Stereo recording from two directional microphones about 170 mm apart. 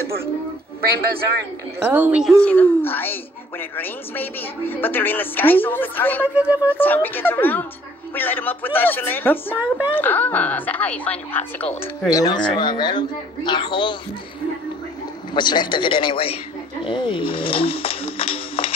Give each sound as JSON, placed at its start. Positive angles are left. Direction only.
{"t": 1.9, "sound": "speech", "side_deg": -10}
{"t": 2.4, "sound": "a woman's voice", "side_deg": 10}
{"t": 6.2, "sound": "speech", "side_deg": -10}
{"t": 6.8, "sound": "a woman's voice", "side_deg": 10}
{"t": 12.1, "sound": "speech", "side_deg": 20}
{"t": 15.3, "sound": "speech", "side_deg": 25}
{"t": 16.8, "sound": "music", "side_deg": 30}